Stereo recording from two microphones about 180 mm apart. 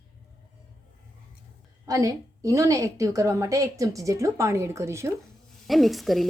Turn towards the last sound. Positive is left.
turn(degrees=0)  # may be behind; listen again after turning